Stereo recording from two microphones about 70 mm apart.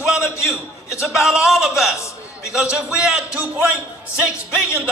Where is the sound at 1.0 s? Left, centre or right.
Centre.